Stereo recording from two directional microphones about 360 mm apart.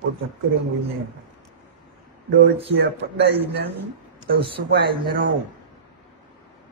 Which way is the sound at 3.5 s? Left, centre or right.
Right.